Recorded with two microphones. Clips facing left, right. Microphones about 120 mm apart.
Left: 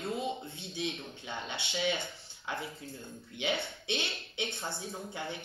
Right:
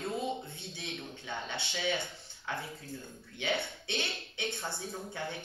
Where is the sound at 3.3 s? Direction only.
15° left (ahead or behind).